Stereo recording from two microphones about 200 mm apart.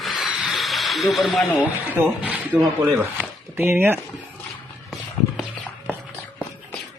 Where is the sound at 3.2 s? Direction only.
10° right (ahead or behind).